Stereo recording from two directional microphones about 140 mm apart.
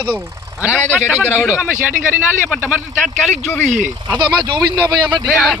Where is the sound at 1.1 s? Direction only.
10° right (ahead or behind).